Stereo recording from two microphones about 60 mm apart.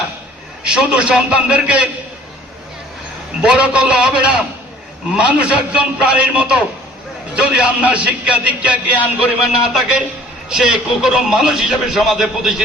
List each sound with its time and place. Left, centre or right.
0.6 s a man's voice: centre
3.4 s a man's voice: centre